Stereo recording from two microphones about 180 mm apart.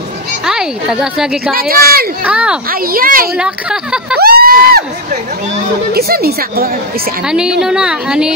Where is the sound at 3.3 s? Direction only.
5° right (ahead or behind).